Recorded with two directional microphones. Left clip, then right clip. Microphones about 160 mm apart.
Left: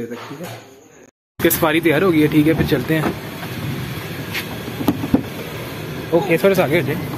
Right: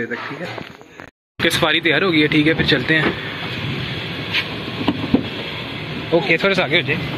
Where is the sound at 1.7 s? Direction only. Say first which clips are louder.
Even; 20° left (ahead or behind).